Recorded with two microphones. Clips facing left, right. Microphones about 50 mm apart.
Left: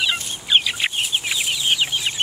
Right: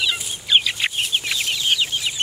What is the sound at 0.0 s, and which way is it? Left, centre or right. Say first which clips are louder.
Chicken: left 1 dB; centre.